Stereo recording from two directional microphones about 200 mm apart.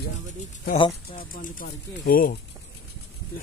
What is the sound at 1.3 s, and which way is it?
Speech, 45° left (ahead or behind).